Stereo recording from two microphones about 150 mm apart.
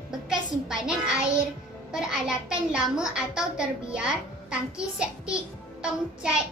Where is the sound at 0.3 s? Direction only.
5° right (ahead or behind).